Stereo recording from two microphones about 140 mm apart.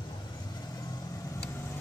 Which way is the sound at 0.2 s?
30° left (ahead or behind).